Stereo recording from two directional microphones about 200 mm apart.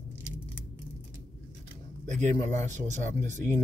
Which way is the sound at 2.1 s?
35° right (ahead or behind).